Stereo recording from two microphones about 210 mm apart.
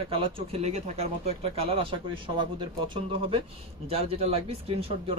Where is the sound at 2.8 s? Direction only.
25° right (ahead or behind).